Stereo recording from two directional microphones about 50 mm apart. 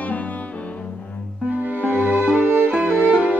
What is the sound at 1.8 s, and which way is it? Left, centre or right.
Music, right.